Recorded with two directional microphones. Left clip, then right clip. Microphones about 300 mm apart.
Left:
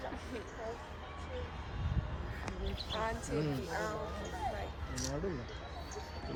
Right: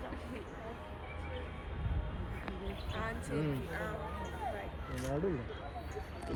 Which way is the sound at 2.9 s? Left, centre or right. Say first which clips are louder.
Left 3 dB; left.